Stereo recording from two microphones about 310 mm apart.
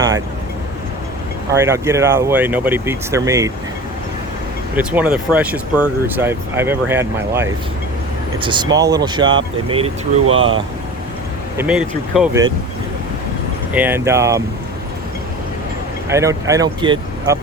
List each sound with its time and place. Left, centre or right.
1.5 s speech: centre
4.8 s speech: centre
10.2 s speech: right
11.5 s speech: centre
13.7 s speech: centre
16.0 s speech: centre